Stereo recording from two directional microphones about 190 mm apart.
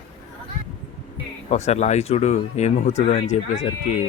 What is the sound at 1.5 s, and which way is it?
Speech, 35° left (ahead or behind).